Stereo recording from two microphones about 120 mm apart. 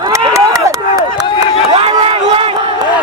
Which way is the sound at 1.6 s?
50° right (ahead or behind).